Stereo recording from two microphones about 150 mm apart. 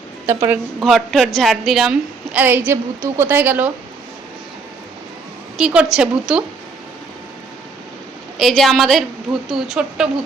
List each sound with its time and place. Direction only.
0.3 s a woman's voice: 15° right (ahead or behind)
0.8 s a woman's voice: centre (ahead or behind)
5.5 s a woman's voice: 5° right (ahead or behind)
8.4 s a woman's voice: centre (ahead or behind)